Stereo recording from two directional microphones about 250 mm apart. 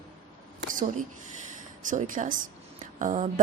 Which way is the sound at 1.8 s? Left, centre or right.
Right.